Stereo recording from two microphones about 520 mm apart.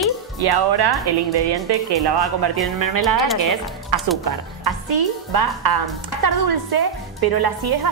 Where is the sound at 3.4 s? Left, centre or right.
Right.